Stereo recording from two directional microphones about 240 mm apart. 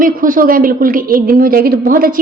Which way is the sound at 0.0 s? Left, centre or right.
Right.